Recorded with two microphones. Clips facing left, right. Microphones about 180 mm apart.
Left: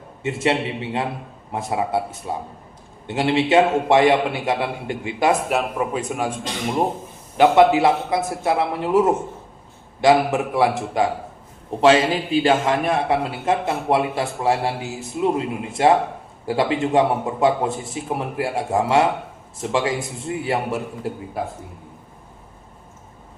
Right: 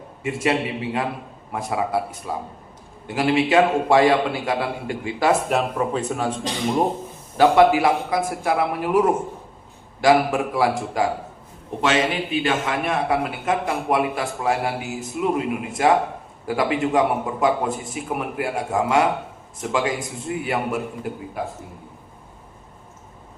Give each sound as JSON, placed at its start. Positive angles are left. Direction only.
{"t": 0.2, "sound": "a man's voice", "side_deg": 25}
{"t": 5.5, "sound": "a man's voice", "side_deg": 10}
{"t": 7.3, "sound": "a man's voice", "side_deg": 20}